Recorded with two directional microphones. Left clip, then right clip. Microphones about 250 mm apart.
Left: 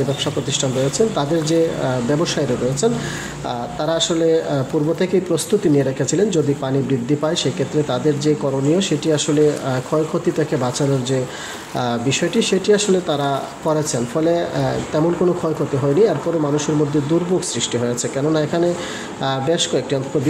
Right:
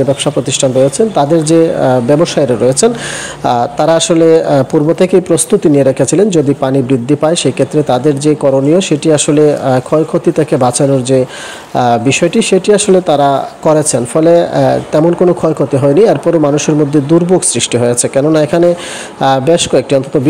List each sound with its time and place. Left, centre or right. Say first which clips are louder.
0.2 s speech: right 9 dB; right